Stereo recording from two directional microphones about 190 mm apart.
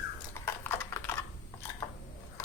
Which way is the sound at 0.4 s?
10° left (ahead or behind).